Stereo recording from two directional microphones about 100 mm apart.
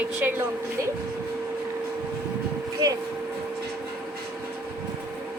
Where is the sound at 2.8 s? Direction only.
40° right (ahead or behind).